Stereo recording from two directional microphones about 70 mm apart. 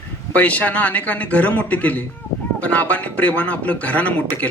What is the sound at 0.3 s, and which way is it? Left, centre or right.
A man's voice, left.